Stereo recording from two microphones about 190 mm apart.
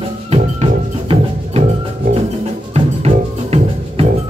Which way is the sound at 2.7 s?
30° right (ahead or behind).